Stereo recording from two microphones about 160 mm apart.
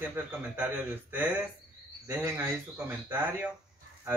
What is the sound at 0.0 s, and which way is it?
Speech, 10° right (ahead or behind).